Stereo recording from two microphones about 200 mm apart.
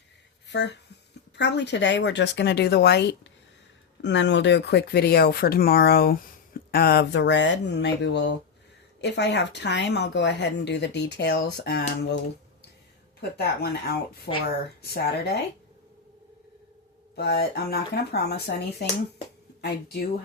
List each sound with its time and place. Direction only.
0.4 s a sound: 60° left (ahead or behind)
1.4 s speech: 60° left (ahead or behind)
13.3 s speech: 50° left (ahead or behind)
17.2 s speech: 55° left (ahead or behind)